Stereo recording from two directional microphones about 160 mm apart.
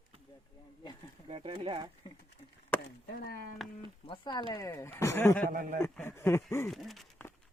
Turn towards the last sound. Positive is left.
turn(degrees=0)  # may be behind; listen again after turning